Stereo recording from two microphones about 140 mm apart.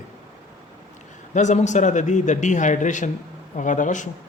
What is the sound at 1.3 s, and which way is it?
A man's voice, 55° left (ahead or behind).